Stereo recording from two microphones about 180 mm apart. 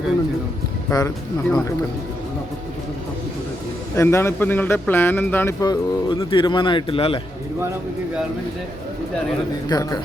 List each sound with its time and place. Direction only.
0.9 s speech: 15° left (ahead or behind)
3.9 s speech: 15° left (ahead or behind); by 7.2 s 30° left (ahead or behind)
9.6 s speech: 20° left (ahead or behind)